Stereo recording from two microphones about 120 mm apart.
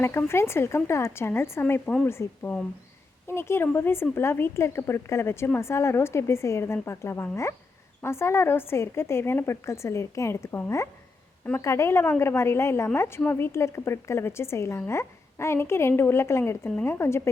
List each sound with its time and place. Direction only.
0.0 s a woman's voice: 20° left (ahead or behind)